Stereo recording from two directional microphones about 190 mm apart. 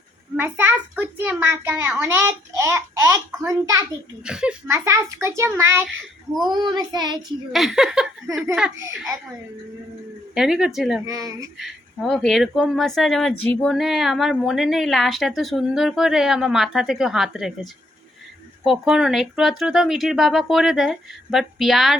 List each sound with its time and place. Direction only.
0.3 s a child's voice: 10° right (ahead or behind)
4.3 s a child's voice: 5° right (ahead or behind)
6.5 s child singing: 25° right (ahead or behind)
7.2 s speech: centre (ahead or behind)
10.3 s speech: 5° right (ahead or behind)
11.0 s a child's voice: 20° right (ahead or behind)
11.5 s speech: centre (ahead or behind)